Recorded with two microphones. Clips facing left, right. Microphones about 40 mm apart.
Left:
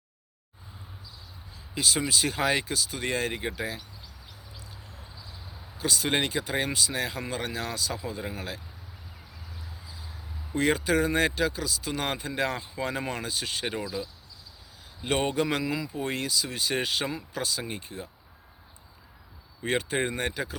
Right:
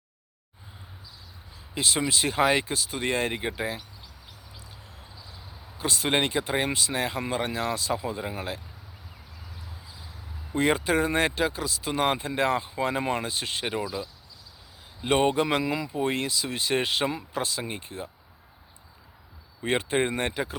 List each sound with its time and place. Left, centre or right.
1.7 s speech: right
5.7 s speech: right
10.5 s speech: right
19.6 s speech: right